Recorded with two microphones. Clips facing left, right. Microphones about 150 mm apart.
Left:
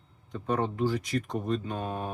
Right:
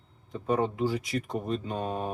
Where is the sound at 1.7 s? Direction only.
25° right (ahead or behind).